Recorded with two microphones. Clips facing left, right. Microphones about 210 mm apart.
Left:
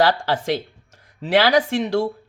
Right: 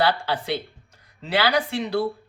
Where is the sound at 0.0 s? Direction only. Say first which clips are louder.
Left 4 dB; 90° left.